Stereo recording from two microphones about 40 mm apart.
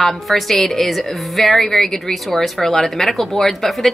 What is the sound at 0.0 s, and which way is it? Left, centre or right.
A woman's voice, centre.